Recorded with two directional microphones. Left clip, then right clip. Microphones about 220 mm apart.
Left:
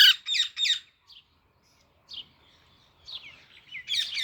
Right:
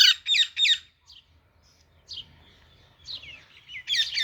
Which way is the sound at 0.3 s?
60° left (ahead or behind).